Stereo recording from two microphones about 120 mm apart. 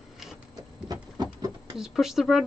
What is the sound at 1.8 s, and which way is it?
Speech, 5° right (ahead or behind).